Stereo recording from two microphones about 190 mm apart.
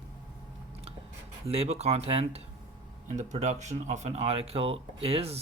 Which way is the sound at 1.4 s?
30° right (ahead or behind).